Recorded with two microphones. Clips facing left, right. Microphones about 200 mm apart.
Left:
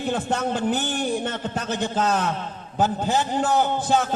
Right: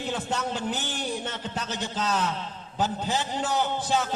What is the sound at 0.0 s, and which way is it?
A man's voice, 50° left (ahead or behind).